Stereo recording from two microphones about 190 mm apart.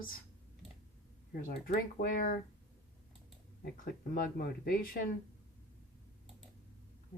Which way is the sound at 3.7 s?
50° left (ahead or behind).